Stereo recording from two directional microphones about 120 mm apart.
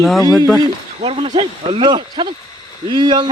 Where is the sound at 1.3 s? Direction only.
40° right (ahead or behind).